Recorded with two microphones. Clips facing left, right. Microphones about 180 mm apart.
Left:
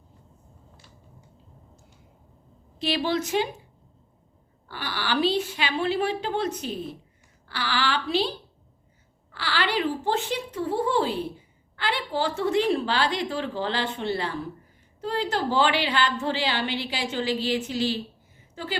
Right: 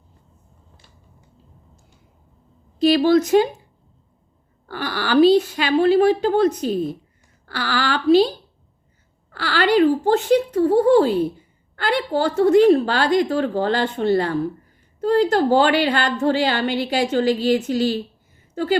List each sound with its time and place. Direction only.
2.7 s a woman's voice: 40° right (ahead or behind)
4.7 s a woman's voice: 45° right (ahead or behind)
9.3 s a woman's voice: 45° right (ahead or behind)